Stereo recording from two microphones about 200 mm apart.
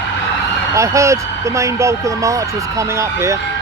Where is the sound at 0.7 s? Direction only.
15° right (ahead or behind).